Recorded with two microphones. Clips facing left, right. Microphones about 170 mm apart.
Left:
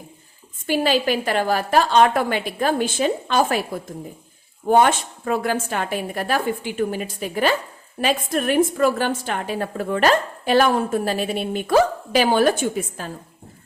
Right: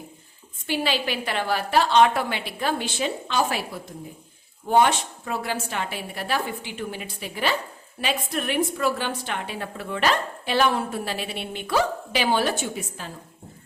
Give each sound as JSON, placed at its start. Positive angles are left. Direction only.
{"t": 0.7, "sound": "a woman's voice", "side_deg": 45}